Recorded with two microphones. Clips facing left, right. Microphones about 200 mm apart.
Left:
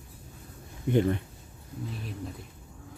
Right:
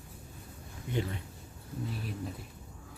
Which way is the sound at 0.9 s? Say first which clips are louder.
Left 10 dB; 55° left (ahead or behind).